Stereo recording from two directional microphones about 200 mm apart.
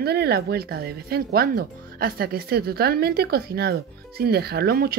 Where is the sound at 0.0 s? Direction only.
55° right (ahead or behind).